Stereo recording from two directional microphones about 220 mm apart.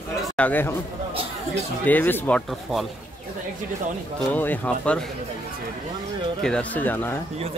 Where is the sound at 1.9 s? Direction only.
10° left (ahead or behind).